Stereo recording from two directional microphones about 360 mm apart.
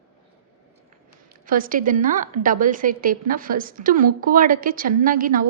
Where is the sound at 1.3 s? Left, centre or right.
Right.